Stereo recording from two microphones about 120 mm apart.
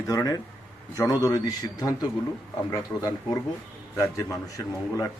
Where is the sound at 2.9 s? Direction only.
15° left (ahead or behind).